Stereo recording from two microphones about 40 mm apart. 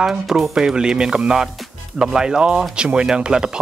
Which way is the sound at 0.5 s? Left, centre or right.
Centre.